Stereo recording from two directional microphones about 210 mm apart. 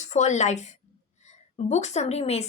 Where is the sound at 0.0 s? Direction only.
35° left (ahead or behind).